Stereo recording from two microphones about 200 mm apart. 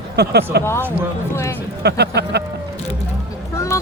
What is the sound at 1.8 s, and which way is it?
Speech, 55° right (ahead or behind).